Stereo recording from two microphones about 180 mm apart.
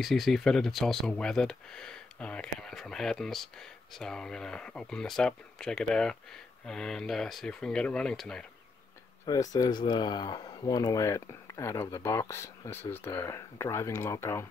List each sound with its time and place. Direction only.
0.0 s speech: centre (ahead or behind)
9.2 s speech: 20° left (ahead or behind)